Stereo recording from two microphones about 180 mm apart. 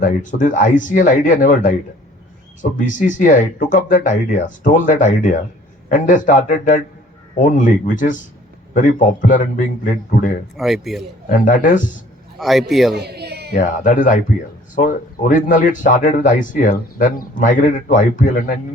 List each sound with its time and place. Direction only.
0.0 s speech: 45° left (ahead or behind)
10.6 s a man's voice: centre (ahead or behind)
11.3 s speech: 45° left (ahead or behind)
12.4 s a man's voice: centre (ahead or behind)
13.0 s a sound: 65° right (ahead or behind)
13.6 s speech: 45° left (ahead or behind)